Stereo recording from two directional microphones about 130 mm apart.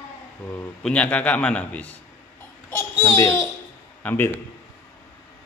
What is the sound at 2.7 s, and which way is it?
Babbling, 25° left (ahead or behind).